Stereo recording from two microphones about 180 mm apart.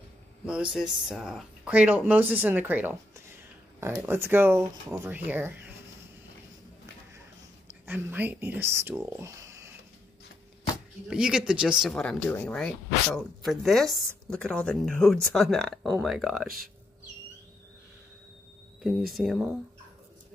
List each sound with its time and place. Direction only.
0.5 s speech: 5° right (ahead or behind)
7.8 s speech: 10° right (ahead or behind)
11.1 s speech: 5° right (ahead or behind)
18.8 s speech: centre (ahead or behind)